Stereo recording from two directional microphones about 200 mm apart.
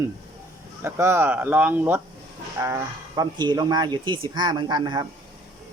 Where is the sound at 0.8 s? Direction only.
10° right (ahead or behind).